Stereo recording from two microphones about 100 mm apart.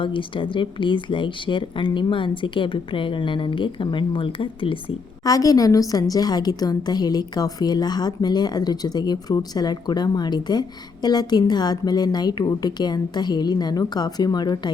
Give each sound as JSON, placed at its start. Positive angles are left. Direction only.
{"t": 0.0, "sound": "speech", "side_deg": 60}
{"t": 5.2, "sound": "a woman's voice", "side_deg": 35}